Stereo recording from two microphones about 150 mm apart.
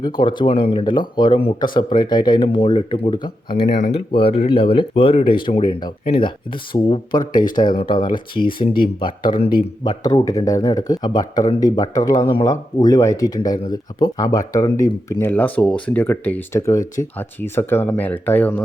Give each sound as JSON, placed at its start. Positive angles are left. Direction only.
{"t": 0.0, "sound": "speech", "side_deg": 30}
{"t": 3.8, "sound": "speech", "side_deg": 55}
{"t": 4.1, "sound": "speech", "side_deg": 35}
{"t": 15.3, "sound": "speech", "side_deg": 10}